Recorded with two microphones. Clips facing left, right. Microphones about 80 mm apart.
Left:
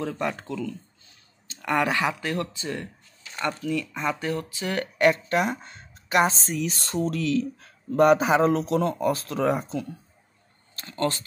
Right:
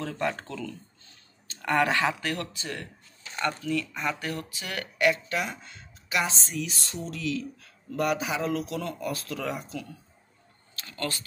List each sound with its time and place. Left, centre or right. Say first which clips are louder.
0.0 s speech: left 2 dB; centre
4.9 s a woman's voice: left 4 dB; left
10.9 s speech: left 7 dB; left